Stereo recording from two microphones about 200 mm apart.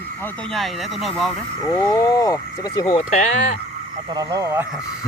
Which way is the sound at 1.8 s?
15° left (ahead or behind).